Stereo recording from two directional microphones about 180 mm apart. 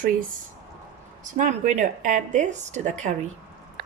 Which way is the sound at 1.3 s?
45° right (ahead or behind).